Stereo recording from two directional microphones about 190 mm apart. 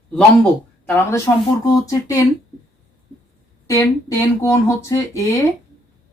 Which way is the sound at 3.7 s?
15° left (ahead or behind).